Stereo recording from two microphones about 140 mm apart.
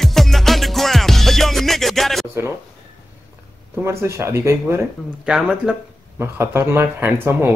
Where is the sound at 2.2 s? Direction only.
20° right (ahead or behind).